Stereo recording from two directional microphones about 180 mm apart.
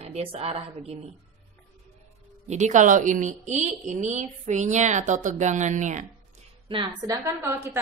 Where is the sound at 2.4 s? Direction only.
40° right (ahead or behind).